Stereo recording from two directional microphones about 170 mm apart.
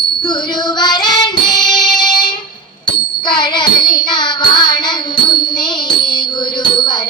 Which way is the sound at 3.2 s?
25° left (ahead or behind).